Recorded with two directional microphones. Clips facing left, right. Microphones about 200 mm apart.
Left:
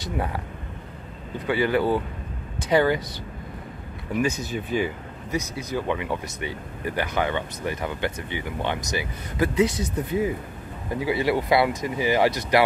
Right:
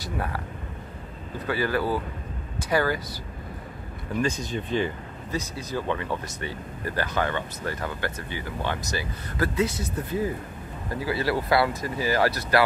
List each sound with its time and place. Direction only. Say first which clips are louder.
0.0 s speech: left 3 dB; 20° left (ahead or behind)
1.5 s speech: left 4 dB; 20° left (ahead or behind)
4.1 s speech: left 2 dB; 10° left (ahead or behind)